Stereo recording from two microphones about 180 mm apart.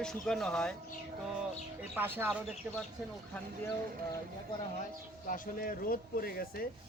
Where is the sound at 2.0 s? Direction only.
10° right (ahead or behind).